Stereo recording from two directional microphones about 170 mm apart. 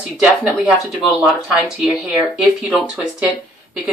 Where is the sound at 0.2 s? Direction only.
5° right (ahead or behind).